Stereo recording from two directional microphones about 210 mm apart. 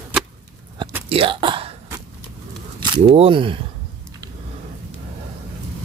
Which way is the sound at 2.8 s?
25° right (ahead or behind).